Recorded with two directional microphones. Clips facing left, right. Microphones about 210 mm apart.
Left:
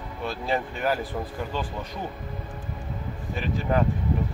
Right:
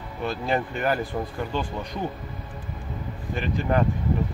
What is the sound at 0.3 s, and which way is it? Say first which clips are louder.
Speech: right 2 dB; centre (ahead or behind).